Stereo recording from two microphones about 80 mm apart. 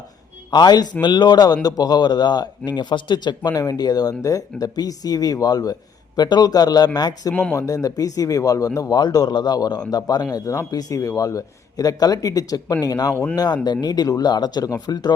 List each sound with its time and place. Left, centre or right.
0.5 s a man's voice: left
7.5 s a man's voice: left
10.3 s a man's voice: left